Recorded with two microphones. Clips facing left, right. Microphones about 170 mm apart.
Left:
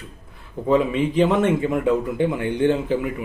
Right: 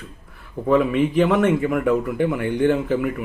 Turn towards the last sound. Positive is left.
turn(degrees=20)  # may be behind; listen again after turning